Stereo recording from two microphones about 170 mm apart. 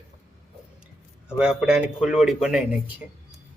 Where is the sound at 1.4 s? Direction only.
5° right (ahead or behind).